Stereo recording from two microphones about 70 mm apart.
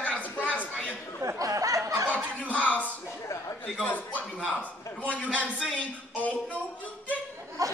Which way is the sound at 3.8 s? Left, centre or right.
Left.